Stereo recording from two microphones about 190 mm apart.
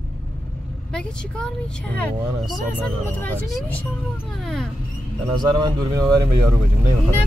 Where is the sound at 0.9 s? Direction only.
5° left (ahead or behind).